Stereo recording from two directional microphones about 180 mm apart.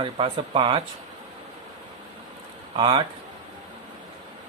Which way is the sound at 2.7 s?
25° right (ahead or behind).